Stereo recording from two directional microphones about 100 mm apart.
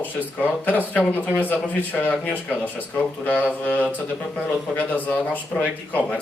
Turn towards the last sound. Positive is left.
turn(degrees=15)  # may be behind; listen again after turning